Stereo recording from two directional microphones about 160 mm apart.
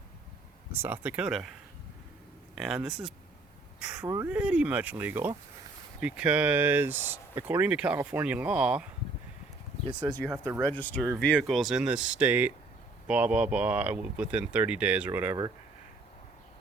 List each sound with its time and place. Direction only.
0.7 s speech: 10° right (ahead or behind)
2.6 s speech: 5° right (ahead or behind)
4.0 s speech: 20° right (ahead or behind)
4.3 s speech: 5° right (ahead or behind)
10.4 s speech: 15° right (ahead or behind)
10.7 s speech: 10° left (ahead or behind); by 15.4 s 10° right (ahead or behind)